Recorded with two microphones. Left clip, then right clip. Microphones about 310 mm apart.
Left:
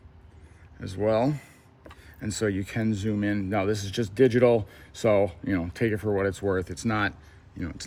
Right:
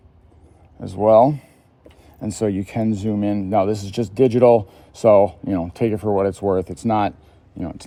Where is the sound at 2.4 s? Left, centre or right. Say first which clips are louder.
Right 6 dB; centre.